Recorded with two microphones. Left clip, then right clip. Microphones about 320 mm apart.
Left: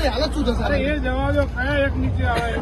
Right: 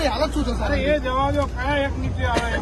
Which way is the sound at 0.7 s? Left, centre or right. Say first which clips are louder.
Right 4 dB; centre.